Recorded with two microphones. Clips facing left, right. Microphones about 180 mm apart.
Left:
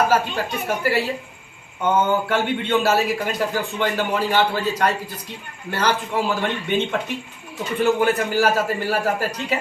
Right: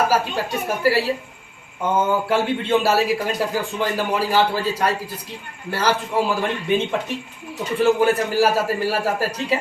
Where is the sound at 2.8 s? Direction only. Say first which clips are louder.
Right 1 dB; 10° right (ahead or behind).